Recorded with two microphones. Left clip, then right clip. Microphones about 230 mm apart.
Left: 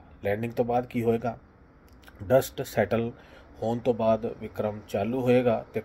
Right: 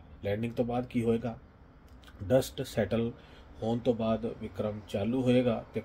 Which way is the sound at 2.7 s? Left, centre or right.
Centre.